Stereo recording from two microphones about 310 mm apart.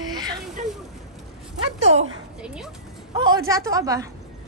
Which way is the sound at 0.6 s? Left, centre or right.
Right.